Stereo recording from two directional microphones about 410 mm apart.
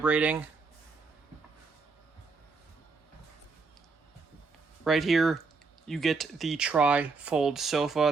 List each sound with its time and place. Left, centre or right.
0.0 s speech: centre
4.8 s speech: centre